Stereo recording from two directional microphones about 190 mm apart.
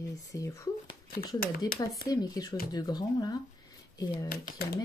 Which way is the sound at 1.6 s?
20° left (ahead or behind).